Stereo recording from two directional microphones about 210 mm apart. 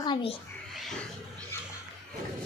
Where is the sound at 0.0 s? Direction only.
25° left (ahead or behind).